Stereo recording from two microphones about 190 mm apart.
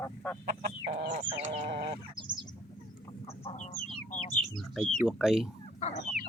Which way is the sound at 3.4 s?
40° left (ahead or behind).